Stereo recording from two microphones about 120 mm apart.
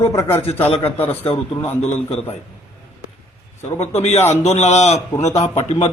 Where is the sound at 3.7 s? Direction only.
60° left (ahead or behind).